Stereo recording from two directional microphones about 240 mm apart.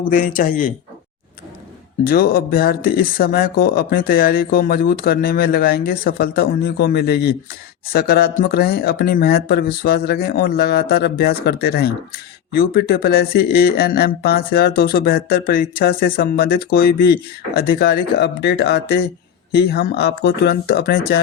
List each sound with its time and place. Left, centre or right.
0.0 s speech: left
2.0 s speech: left